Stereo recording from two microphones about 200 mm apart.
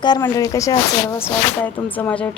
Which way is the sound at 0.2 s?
15° left (ahead or behind).